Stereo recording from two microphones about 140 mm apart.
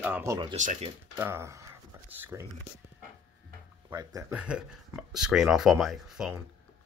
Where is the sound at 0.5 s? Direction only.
65° right (ahead or behind).